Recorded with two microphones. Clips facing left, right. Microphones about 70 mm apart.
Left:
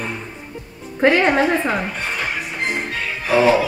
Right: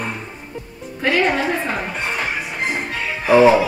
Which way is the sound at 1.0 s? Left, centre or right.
Left.